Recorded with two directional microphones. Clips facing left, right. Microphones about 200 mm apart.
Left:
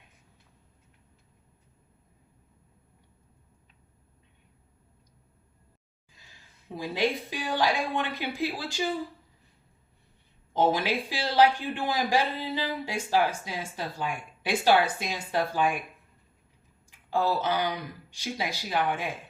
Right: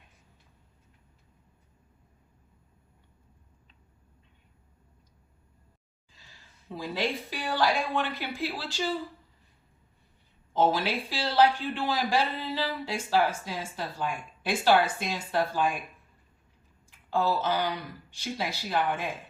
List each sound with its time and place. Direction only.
6.7 s a man's voice: 15° left (ahead or behind)
10.5 s a man's voice: 15° left (ahead or behind)
17.1 s a man's voice: 15° left (ahead or behind)